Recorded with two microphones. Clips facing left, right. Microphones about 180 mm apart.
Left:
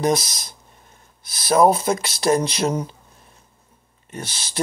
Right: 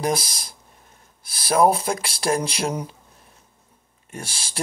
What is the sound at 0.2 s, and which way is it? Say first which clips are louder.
Speech: left 1 dB; 30° right (ahead or behind).